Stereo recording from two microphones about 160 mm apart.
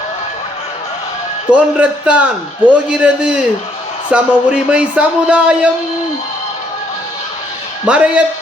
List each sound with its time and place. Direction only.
1.5 s a man's voice: 10° right (ahead or behind)
7.9 s a man's voice: 10° right (ahead or behind)